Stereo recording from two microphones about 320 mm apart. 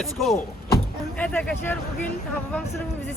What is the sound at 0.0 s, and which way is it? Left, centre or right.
Speech, centre.